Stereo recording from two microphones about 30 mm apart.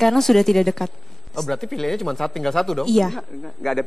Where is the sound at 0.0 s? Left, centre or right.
Centre.